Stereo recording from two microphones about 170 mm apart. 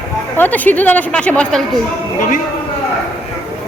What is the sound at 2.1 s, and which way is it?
Speech, 50° left (ahead or behind).